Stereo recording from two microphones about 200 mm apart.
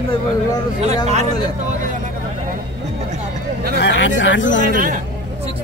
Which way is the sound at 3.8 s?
60° left (ahead or behind).